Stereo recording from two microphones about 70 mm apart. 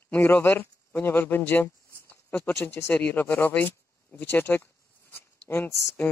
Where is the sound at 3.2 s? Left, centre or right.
Left.